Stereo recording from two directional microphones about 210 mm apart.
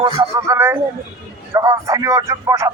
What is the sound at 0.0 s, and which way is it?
A man's voice, 20° right (ahead or behind).